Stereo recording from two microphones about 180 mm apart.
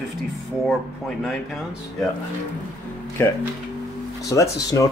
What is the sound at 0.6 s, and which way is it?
Speech, centre (ahead or behind).